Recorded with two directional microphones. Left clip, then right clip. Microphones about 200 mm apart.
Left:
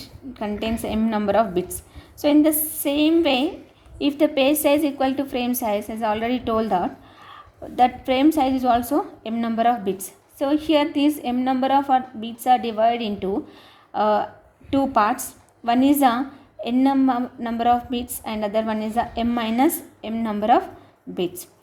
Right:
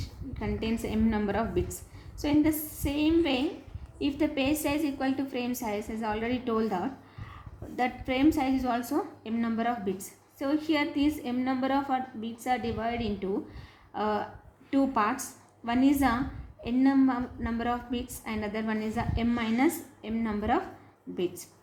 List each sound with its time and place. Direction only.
0.0 s a woman's voice: 45° left (ahead or behind)